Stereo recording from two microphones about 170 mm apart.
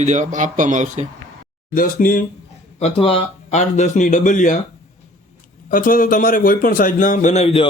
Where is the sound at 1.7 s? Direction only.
55° left (ahead or behind).